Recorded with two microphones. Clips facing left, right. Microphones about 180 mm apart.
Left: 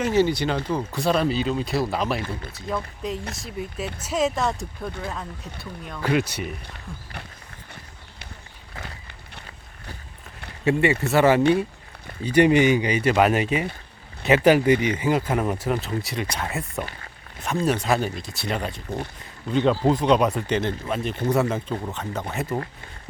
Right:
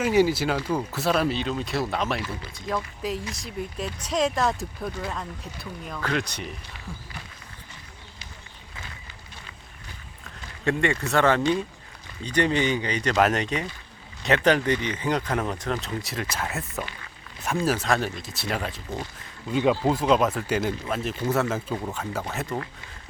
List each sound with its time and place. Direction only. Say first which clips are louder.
0.0 s speech: even; 10° right (ahead or behind)
2.2 s speech: left 2 dB; 50° left (ahead or behind)
2.6 s speech: even; centre (ahead or behind)
8.7 s a sound: left 5 dB; 60° left (ahead or behind)
10.6 s speech: left 4 dB; 5° left (ahead or behind)